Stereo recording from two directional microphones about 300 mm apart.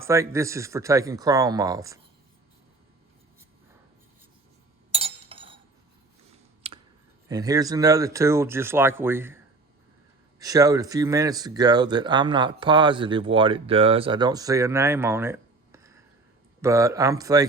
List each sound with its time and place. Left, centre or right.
0.0 s speech: centre
4.9 s chink: centre
6.6 s a sound: centre
7.3 s speech: centre
10.4 s speech: centre